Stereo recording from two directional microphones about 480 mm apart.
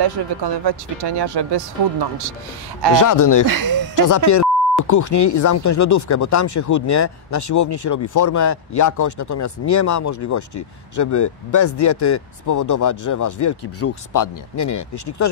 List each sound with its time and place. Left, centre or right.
0.0 s speech: right
2.9 s speech: left
3.4 s speech: right
4.3 s speech: left